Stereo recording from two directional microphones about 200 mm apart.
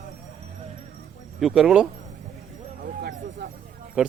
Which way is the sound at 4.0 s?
5° right (ahead or behind).